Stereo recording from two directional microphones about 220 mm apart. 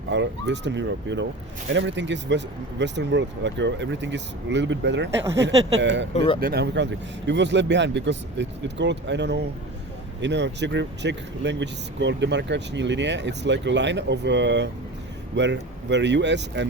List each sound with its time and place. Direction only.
0.1 s speech: 55° right (ahead or behind)
6.1 s speech: 25° left (ahead or behind)
6.4 s speech: 45° right (ahead or behind)